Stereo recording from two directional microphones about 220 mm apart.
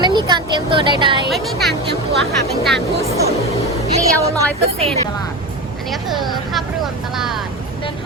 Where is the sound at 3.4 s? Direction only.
30° left (ahead or behind).